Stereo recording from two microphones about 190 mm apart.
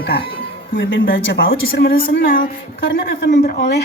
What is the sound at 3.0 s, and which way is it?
Speech, 60° left (ahead or behind).